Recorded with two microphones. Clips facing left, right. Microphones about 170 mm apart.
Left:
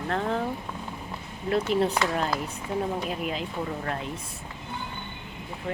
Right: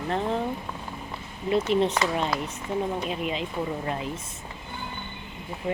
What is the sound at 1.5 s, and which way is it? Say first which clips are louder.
Speech: right 1 dB; centre (ahead or behind).